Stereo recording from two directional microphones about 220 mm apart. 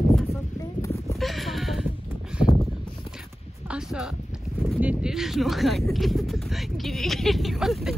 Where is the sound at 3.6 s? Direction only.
5° right (ahead or behind).